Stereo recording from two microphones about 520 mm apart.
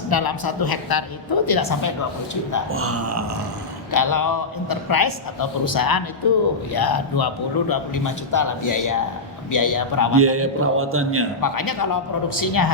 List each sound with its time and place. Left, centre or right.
0.1 s a woman's voice: left
2.6 s a man's voice: right
3.9 s a man's voice: left
10.2 s a man's voice: right
11.3 s a man's voice: left